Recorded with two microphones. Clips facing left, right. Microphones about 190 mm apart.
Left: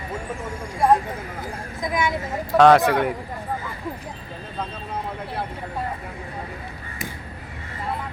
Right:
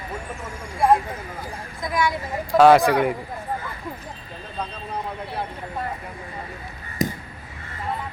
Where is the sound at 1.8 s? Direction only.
20° left (ahead or behind).